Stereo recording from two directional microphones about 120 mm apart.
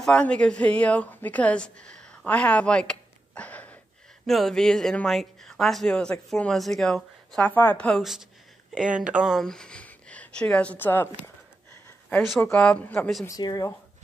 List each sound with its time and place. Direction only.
0.0 s a woman's voice: 10° left (ahead or behind)
8.0 s speech: 5° right (ahead or behind); by 11.3 s 20° left (ahead or behind)
12.4 s a woman's voice: 5° left (ahead or behind)
13.3 s speech: 30° left (ahead or behind)